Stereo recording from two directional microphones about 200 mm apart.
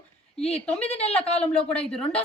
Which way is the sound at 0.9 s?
30° left (ahead or behind).